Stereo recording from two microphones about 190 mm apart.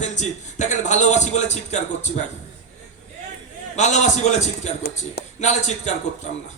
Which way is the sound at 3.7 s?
40° left (ahead or behind).